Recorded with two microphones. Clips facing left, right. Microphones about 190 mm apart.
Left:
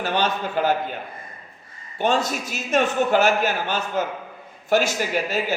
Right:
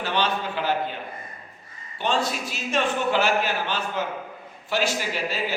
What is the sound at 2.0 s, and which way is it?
A man's voice, 45° left (ahead or behind).